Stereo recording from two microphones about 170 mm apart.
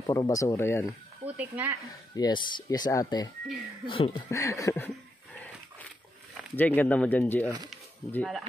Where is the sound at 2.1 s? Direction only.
25° left (ahead or behind).